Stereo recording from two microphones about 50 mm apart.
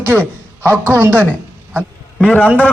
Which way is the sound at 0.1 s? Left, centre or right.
Centre.